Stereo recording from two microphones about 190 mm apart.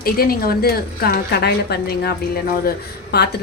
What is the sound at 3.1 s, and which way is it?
Speech, 60° left (ahead or behind).